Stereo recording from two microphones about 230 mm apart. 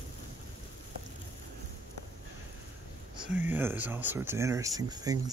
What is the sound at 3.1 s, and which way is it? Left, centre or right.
Speech, centre.